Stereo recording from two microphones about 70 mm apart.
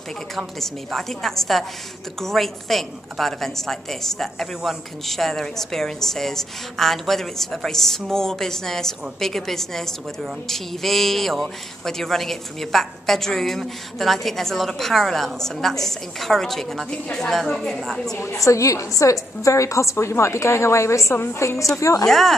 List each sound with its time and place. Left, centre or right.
0.6 s speech: centre
18.1 s a woman's voice: left
22.0 s speech: centre